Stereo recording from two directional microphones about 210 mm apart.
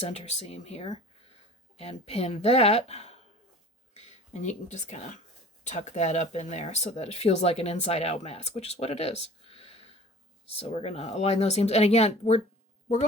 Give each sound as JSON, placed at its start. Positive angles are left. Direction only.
{"t": 0.1, "sound": "speech", "side_deg": 30}